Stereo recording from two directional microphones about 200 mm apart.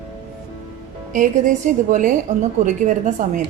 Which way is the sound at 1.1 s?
40° right (ahead or behind).